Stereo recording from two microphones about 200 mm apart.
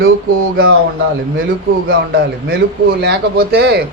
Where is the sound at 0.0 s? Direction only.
90° right.